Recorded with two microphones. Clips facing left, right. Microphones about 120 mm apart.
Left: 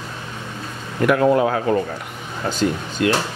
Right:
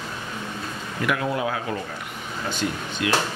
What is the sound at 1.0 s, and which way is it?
Speech, 45° left (ahead or behind).